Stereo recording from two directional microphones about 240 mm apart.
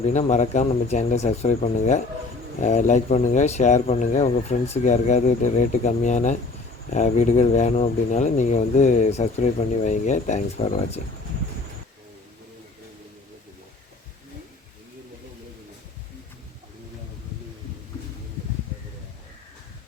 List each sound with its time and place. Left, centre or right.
0.0 s speech: left